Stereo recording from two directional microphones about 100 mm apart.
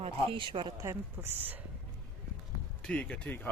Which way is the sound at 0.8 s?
25° right (ahead or behind).